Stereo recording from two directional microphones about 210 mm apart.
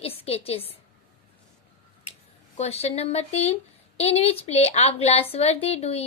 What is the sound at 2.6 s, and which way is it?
A woman's voice, 30° left (ahead or behind).